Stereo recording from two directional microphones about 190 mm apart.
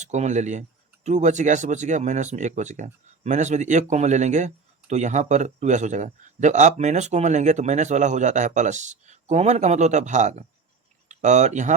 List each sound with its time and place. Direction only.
0.0 s speech: 40° right (ahead or behind)